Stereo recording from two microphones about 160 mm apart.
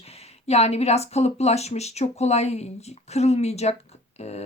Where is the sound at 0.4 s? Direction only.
40° left (ahead or behind).